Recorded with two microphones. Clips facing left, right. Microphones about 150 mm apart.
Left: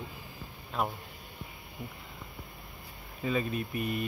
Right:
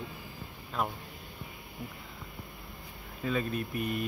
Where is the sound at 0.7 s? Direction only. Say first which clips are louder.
Left 1 dB; centre (ahead or behind).